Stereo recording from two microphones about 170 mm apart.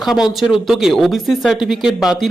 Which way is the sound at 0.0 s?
Centre (ahead or behind).